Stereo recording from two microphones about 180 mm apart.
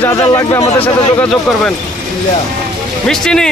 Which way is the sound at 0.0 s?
20° left (ahead or behind).